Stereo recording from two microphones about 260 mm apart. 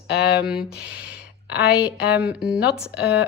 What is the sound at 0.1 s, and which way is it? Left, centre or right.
Speech, left.